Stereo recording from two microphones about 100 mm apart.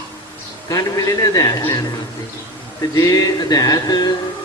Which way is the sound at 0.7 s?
35° left (ahead or behind).